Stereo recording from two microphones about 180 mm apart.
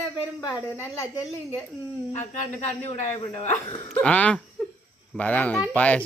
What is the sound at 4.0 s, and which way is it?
Speech, 5° left (ahead or behind).